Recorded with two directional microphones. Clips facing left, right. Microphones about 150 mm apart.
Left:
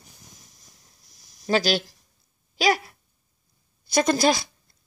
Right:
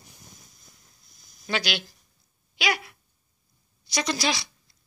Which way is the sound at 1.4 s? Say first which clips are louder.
Left 7 dB; 40° left (ahead or behind).